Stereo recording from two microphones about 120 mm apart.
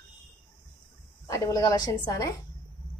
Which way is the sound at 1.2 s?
30° left (ahead or behind).